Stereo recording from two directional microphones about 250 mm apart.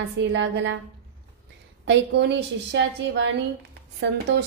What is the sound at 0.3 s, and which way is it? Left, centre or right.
Speech, right.